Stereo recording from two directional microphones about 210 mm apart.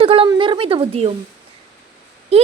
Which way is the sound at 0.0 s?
25° right (ahead or behind).